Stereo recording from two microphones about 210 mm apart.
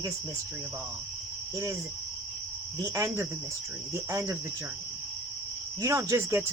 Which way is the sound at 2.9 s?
15° right (ahead or behind).